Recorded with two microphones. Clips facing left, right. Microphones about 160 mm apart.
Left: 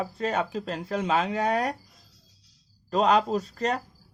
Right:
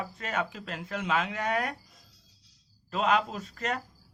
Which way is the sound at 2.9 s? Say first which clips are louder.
Left 5 dB; 35° left (ahead or behind).